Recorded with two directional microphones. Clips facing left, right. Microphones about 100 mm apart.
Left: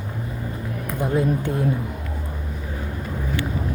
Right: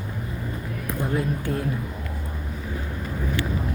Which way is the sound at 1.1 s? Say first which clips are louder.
Left 6 dB; 25° left (ahead or behind).